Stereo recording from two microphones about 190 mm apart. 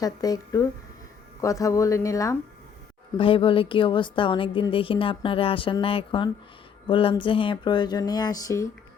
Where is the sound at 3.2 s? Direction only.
25° left (ahead or behind).